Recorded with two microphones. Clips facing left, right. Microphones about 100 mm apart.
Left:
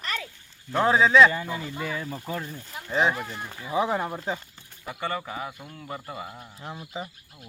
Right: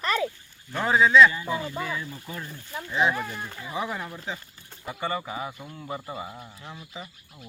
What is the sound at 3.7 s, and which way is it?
Speech, 25° left (ahead or behind).